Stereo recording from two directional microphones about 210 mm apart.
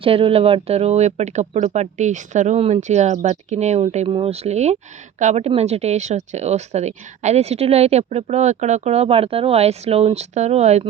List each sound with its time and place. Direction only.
0.0 s speech: 25° right (ahead or behind)